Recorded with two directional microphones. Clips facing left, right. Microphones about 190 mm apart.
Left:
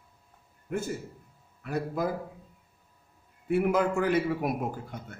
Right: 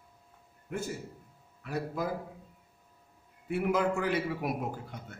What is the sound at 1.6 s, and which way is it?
Speech, 50° left (ahead or behind).